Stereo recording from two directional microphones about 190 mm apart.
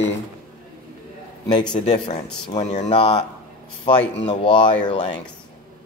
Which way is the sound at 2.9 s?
25° left (ahead or behind).